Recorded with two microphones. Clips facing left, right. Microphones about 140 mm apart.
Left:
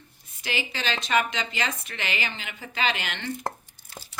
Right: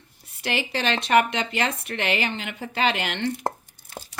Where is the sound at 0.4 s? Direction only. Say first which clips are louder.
Right 5 dB; 65° right (ahead or behind).